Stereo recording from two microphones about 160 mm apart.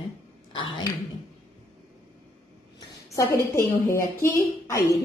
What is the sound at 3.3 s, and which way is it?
A woman's voice, 20° left (ahead or behind).